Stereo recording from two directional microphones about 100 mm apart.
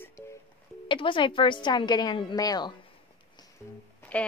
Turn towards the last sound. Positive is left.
turn(degrees=15)  # may be behind; listen again after turning